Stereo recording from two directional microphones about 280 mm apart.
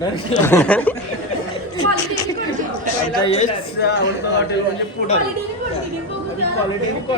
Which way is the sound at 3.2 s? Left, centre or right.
Left.